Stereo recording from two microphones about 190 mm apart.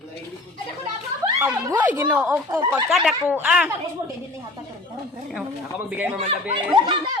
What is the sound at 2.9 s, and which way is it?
Speech, centre (ahead or behind).